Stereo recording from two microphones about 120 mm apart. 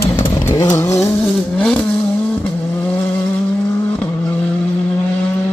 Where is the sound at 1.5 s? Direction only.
10° left (ahead or behind).